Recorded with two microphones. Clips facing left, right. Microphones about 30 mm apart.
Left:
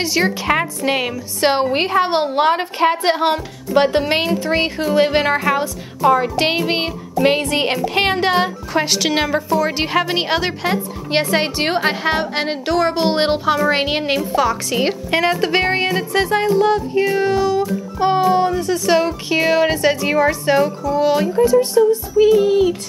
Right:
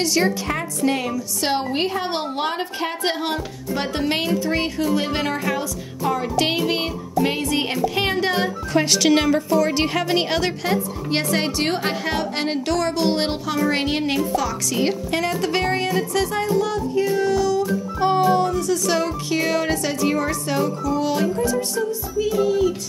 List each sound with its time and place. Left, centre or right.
0.0 s a woman's voice: left
0.5 s a woman's voice: left
4.3 s speech: left
4.6 s a woman's voice: left
8.7 s a woman's voice: centre; by 22.8 s left